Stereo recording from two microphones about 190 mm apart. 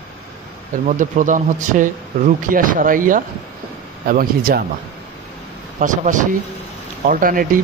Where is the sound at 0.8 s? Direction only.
45° right (ahead or behind).